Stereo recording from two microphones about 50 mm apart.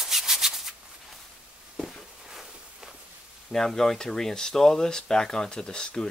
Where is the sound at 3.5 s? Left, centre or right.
Centre.